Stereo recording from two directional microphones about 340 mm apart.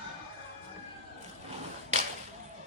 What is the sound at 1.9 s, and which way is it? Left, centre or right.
Whip, centre.